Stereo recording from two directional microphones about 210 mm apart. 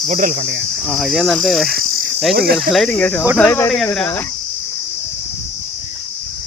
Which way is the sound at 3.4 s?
10° left (ahead or behind).